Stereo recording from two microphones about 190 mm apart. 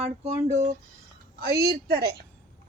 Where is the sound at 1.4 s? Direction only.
55° right (ahead or behind).